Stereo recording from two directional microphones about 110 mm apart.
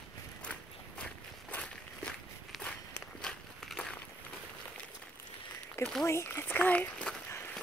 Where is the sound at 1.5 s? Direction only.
10° left (ahead or behind).